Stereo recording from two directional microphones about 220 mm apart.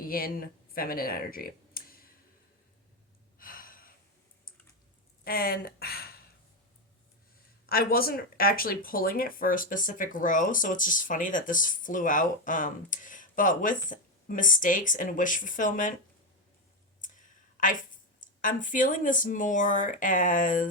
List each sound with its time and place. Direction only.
0.0 s speech: 40° left (ahead or behind)
3.3 s gasp: 40° left (ahead or behind)
5.2 s speech: 45° left (ahead or behind)
7.7 s speech: 45° left (ahead or behind)
17.0 s a woman's voice: 35° left (ahead or behind)